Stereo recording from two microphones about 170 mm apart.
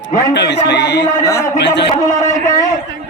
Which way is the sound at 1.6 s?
90° left.